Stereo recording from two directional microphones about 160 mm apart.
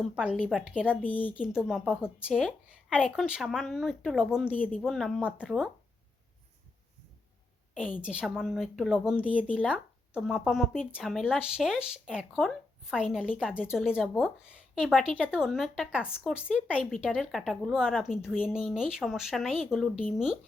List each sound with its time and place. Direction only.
0.0 s a woman's voice: 5° right (ahead or behind)
0.9 s a woman's voice: 10° left (ahead or behind)
1.4 s speech: 5° right (ahead or behind)
4.5 s a woman's voice: 10° left (ahead or behind)
4.8 s speech: centre (ahead or behind)
8.0 s a woman's voice: 5° right (ahead or behind)